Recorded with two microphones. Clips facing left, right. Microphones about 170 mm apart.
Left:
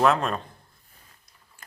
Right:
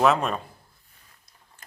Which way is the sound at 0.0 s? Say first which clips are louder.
Right 1 dB; centre (ahead or behind).